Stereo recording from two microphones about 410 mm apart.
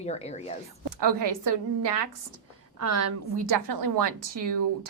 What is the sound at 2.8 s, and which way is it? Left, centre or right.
A woman's voice, right.